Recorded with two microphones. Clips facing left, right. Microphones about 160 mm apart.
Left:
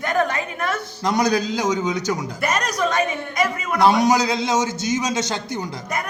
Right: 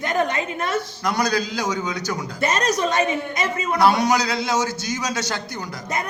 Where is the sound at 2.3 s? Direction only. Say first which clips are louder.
Right 5 dB; 25° right (ahead or behind).